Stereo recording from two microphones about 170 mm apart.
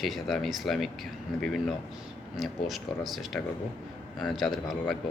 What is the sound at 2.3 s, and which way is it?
Speech, centre (ahead or behind).